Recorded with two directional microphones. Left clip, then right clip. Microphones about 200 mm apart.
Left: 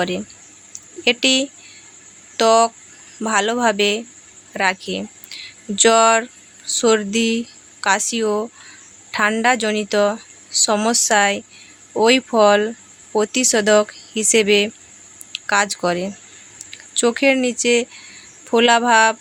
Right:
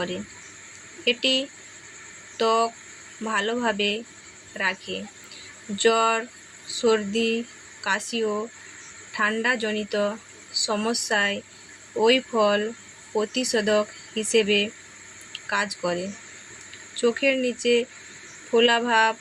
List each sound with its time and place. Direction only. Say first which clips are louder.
1.0 s speech: left 6 dB; 55° left (ahead or behind)